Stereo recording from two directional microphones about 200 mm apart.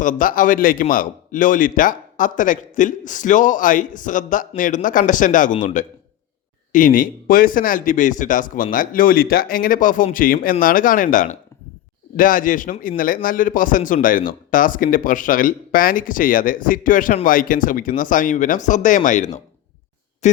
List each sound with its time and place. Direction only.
0.0 s speech: 40° left (ahead or behind)